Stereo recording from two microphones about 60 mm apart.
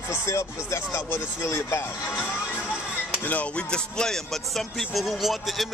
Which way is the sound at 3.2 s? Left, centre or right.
Left.